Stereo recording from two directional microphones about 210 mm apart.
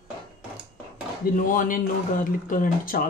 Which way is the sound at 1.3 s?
40° left (ahead or behind).